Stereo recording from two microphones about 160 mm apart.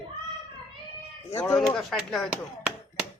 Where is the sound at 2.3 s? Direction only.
10° right (ahead or behind).